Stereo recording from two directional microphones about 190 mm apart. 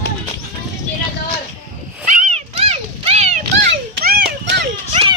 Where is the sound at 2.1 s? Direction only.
40° right (ahead or behind).